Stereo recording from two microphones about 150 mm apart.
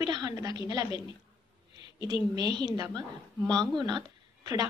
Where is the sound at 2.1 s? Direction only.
30° right (ahead or behind).